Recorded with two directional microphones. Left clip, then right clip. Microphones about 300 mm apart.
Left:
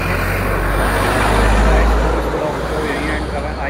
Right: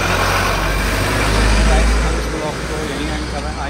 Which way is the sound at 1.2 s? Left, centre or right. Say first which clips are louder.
Left 2 dB; centre.